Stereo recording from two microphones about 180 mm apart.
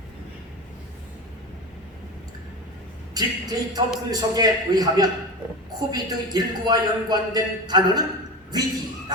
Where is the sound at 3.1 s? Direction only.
20° right (ahead or behind).